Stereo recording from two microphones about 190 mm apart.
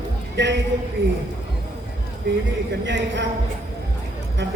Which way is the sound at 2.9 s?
70° right (ahead or behind).